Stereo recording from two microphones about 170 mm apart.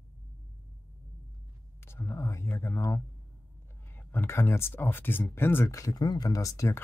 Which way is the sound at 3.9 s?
10° left (ahead or behind).